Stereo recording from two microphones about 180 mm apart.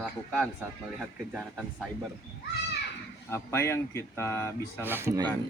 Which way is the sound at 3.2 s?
15° left (ahead or behind).